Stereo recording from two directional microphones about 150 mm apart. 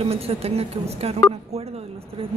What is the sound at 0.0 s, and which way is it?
A woman's voice, 40° right (ahead or behind).